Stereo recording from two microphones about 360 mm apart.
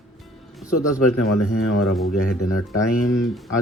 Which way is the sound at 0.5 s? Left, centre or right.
Centre.